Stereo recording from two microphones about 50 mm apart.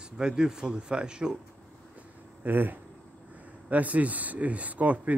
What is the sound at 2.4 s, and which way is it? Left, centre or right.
Speech, right.